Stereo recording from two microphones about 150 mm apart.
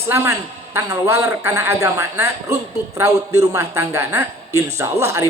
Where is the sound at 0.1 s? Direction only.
15° right (ahead or behind).